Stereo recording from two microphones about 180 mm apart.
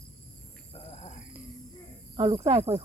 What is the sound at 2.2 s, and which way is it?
Speech, 30° right (ahead or behind).